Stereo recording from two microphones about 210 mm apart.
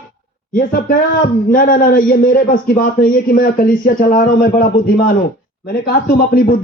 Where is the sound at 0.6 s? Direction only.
45° left (ahead or behind).